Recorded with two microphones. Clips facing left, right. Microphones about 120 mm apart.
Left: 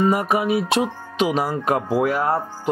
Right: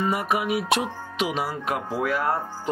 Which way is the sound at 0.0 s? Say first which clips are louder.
Left 5 dB; 40° left (ahead or behind).